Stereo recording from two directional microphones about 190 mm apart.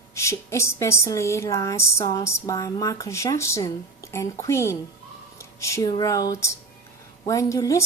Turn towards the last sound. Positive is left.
turn(degrees=15)  # may be behind; listen again after turning